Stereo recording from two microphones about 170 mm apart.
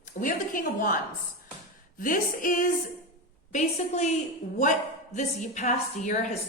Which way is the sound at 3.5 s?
45° left (ahead or behind).